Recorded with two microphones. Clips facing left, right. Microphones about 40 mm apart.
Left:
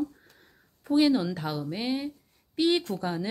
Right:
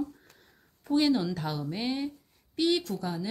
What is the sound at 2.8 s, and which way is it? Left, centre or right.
Speech, left.